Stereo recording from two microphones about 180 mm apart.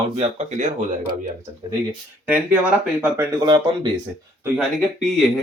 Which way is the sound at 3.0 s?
15° right (ahead or behind).